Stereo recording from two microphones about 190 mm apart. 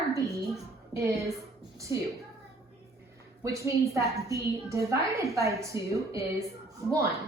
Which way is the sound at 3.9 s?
15° right (ahead or behind).